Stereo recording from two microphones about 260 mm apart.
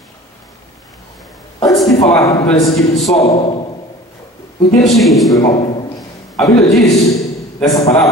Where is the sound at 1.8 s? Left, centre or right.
Centre.